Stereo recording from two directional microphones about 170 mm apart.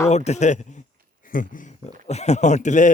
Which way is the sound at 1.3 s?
55° left (ahead or behind).